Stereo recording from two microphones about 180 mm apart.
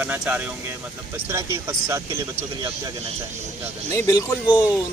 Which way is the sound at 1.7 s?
15° right (ahead or behind).